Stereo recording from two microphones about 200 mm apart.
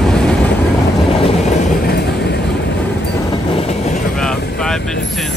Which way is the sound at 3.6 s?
30° left (ahead or behind).